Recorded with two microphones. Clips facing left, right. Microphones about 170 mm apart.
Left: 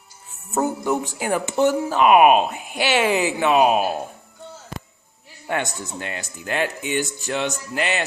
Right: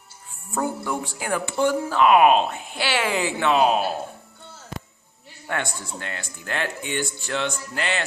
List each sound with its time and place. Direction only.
0.5 s speech: 20° left (ahead or behind)
5.5 s speech: 15° left (ahead or behind)